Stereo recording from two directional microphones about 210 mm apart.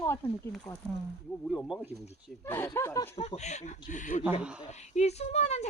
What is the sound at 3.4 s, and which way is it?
Speech, 35° left (ahead or behind).